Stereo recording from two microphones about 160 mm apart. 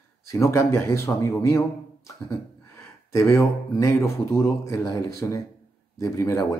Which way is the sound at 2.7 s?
20° left (ahead or behind).